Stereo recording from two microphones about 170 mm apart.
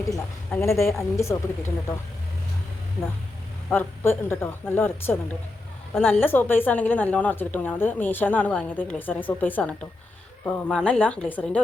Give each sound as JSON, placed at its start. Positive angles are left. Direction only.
{"t": 0.1, "sound": "a woman's voice", "side_deg": 15}
{"t": 3.7, "sound": "a woman's voice", "side_deg": 15}